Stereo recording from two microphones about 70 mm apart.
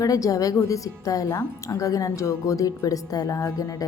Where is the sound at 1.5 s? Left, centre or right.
Left.